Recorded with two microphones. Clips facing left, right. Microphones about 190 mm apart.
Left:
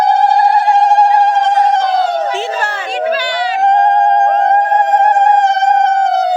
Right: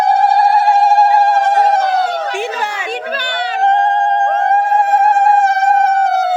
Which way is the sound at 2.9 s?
55° right (ahead or behind).